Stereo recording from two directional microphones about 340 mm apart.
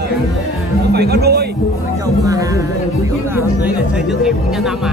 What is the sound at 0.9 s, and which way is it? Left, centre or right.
Speech, right.